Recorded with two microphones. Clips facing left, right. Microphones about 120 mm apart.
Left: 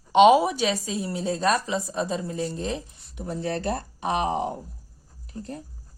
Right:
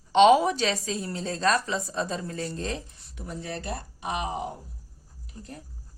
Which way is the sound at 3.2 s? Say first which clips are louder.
Left 6 dB; 30° left (ahead or behind).